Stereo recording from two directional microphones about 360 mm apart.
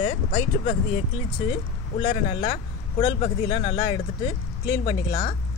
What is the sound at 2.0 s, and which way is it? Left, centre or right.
Speech, centre.